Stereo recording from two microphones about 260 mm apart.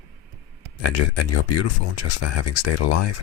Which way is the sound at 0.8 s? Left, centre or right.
Left.